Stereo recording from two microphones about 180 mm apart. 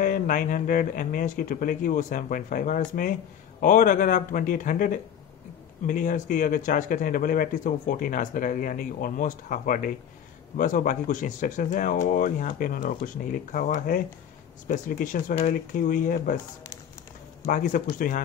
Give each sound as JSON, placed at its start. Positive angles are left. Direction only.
{"t": 0.0, "sound": "speech", "side_deg": 50}
{"t": 17.5, "sound": "speech", "side_deg": 45}